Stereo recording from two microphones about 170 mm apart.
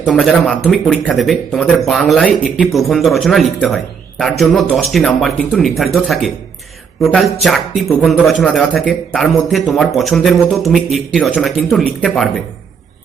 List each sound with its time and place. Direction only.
0.1 s speech: centre (ahead or behind)